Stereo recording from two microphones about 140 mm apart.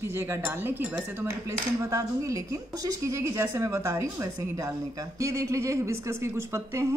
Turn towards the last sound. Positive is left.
turn(degrees=-20)  # may be behind; listen again after turning